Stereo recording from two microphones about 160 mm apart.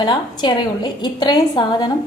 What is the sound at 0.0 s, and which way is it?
A woman's voice, 30° left (ahead or behind).